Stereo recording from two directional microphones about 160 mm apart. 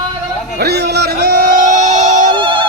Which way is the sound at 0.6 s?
90° right.